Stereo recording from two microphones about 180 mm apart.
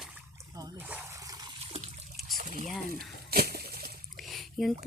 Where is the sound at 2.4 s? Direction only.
50° right (ahead or behind).